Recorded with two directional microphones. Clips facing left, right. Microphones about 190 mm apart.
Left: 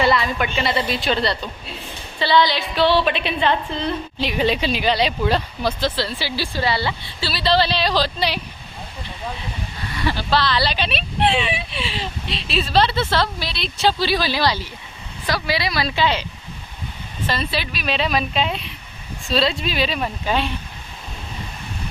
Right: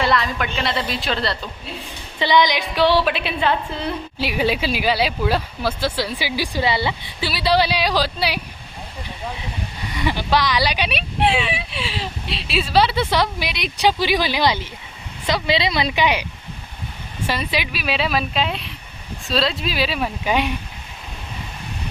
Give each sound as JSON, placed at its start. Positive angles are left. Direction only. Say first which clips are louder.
{"t": 0.0, "sound": "a woman's voice", "louder": "left 2 dB", "side_deg": 0}
{"t": 2.1, "sound": "a woman's voice", "louder": "even", "side_deg": -15}
{"t": 9.9, "sound": "a woman's voice", "louder": "right 1 dB", "side_deg": -15}
{"t": 17.2, "sound": "a woman's voice", "louder": "right 1 dB", "side_deg": -15}